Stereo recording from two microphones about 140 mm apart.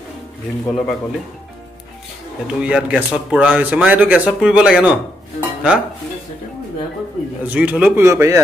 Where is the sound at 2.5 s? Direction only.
5° right (ahead or behind).